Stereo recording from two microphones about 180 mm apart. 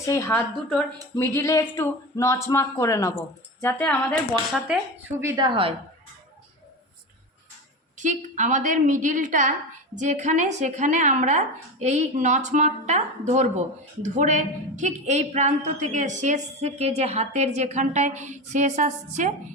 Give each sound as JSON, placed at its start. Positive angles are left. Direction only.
{"t": 0.0, "sound": "speech", "side_deg": 15}
{"t": 4.7, "sound": "speech", "side_deg": -5}
{"t": 5.2, "sound": "a woman's voice", "side_deg": -25}
{"t": 7.9, "sound": "a woman's voice", "side_deg": -45}